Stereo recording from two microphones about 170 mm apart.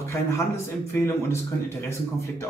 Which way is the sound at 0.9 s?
15° left (ahead or behind).